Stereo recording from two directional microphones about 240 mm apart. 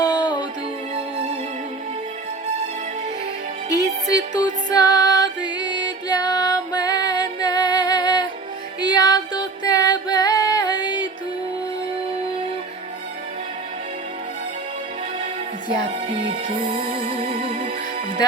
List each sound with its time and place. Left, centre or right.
0.0 s music: centre
3.7 s music: right
4.4 s music: centre